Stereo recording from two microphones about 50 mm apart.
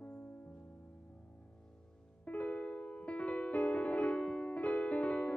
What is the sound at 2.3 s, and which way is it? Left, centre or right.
Music, left.